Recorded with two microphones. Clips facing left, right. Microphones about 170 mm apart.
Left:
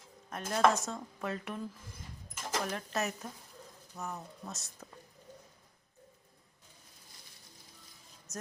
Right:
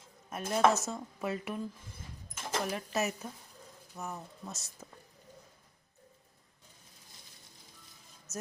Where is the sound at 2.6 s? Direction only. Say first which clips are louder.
Right 2 dB; 10° right (ahead or behind).